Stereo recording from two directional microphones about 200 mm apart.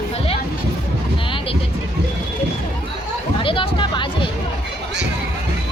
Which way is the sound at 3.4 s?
25° left (ahead or behind).